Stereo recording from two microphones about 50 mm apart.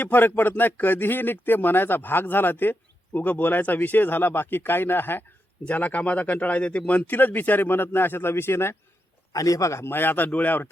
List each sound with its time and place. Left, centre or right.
0.0 s speech: left
5.6 s speech: left
7.1 s speech: left
9.6 s speech: left
9.8 s speech: left